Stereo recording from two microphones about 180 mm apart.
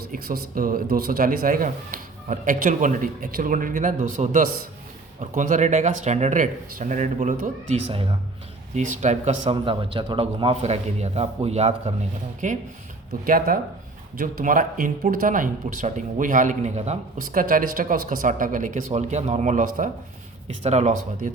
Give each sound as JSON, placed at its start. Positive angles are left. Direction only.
{"t": 0.1, "sound": "a man's voice", "side_deg": -55}
{"t": 9.5, "sound": "a man's voice", "side_deg": -30}
{"t": 17.4, "sound": "a man's voice", "side_deg": -50}